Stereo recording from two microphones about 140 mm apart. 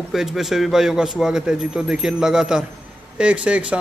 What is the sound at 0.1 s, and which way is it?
A man's voice, 5° right (ahead or behind).